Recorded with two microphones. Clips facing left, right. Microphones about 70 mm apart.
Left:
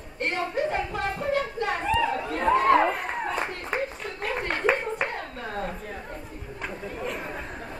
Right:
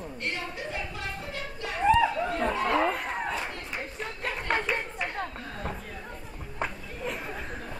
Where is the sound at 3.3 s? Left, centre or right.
Left.